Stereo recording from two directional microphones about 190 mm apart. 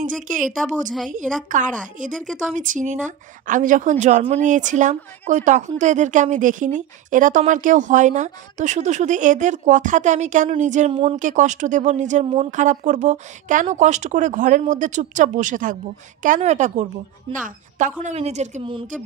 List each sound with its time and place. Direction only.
0.0 s a woman's voice: 45° right (ahead or behind)
11.2 s speech: 40° right (ahead or behind)